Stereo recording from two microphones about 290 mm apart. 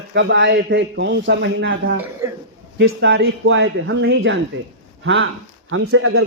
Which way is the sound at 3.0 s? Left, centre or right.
Right.